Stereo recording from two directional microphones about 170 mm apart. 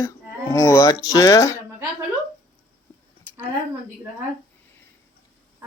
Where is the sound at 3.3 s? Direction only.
10° left (ahead or behind).